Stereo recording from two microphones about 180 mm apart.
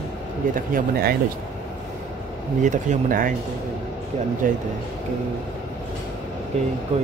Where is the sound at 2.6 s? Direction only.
45° right (ahead or behind).